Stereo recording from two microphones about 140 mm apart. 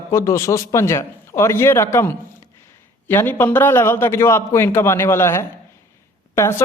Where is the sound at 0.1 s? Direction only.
20° left (ahead or behind).